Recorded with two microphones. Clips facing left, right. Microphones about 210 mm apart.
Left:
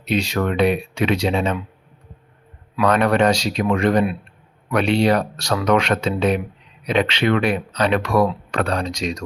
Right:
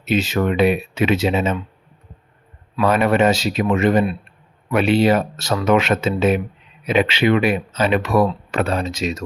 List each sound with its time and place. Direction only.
0.0 s speech: 5° right (ahead or behind)
2.8 s speech: 5° right (ahead or behind)